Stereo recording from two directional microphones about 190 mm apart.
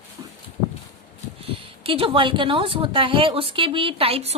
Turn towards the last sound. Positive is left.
turn(degrees=-30)  # may be behind; listen again after turning